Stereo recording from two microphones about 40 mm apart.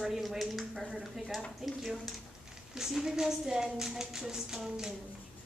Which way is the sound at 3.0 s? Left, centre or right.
Centre.